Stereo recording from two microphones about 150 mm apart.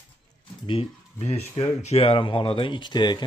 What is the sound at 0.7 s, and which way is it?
Speech, 40° left (ahead or behind).